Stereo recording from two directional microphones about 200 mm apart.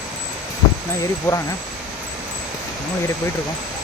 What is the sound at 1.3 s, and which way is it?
Speech, 15° left (ahead or behind).